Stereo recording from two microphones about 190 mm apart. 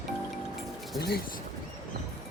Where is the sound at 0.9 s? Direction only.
55° left (ahead or behind).